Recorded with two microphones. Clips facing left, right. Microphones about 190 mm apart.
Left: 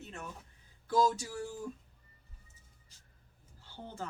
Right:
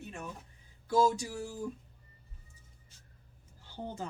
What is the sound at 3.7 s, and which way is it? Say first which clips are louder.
Speech: right 3 dB; 15° right (ahead or behind).